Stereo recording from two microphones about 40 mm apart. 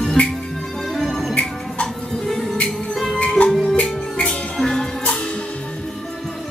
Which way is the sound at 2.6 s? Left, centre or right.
Centre.